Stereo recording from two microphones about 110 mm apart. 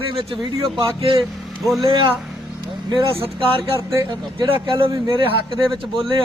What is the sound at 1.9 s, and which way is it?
Speech, 50° right (ahead or behind).